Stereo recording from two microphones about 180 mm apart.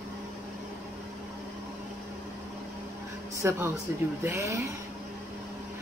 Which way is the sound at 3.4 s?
15° right (ahead or behind).